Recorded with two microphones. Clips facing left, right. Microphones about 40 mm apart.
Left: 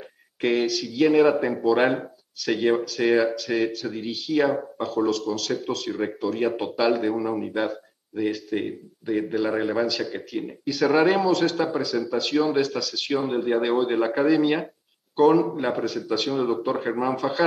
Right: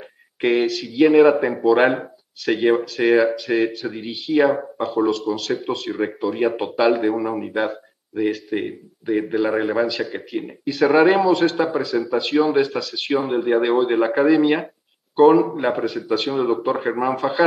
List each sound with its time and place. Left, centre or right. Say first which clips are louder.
0.4 s speech: right 4 dB; centre